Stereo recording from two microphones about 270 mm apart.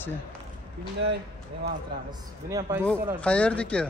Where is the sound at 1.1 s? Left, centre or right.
Right.